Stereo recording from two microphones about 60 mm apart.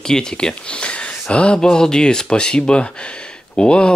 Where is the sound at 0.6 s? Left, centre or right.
Centre.